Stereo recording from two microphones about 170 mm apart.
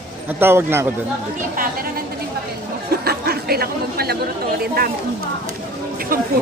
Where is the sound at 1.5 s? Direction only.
60° right (ahead or behind).